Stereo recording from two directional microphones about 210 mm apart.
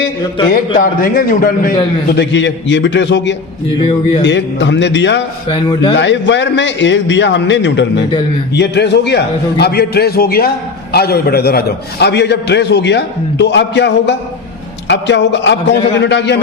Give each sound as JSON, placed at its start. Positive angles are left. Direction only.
{"t": 0.8, "sound": "a man's voice", "side_deg": 45}
{"t": 2.1, "sound": "a man's voice", "side_deg": 55}
{"t": 3.8, "sound": "speech", "side_deg": 25}
{"t": 4.3, "sound": "a man's voice", "side_deg": 55}